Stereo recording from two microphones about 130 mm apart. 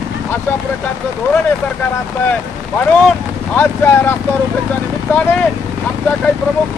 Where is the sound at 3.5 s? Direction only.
15° left (ahead or behind).